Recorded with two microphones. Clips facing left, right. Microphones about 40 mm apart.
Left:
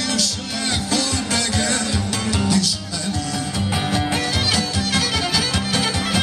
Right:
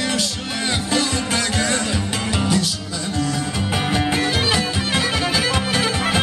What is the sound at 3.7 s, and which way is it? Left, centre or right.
Music, centre.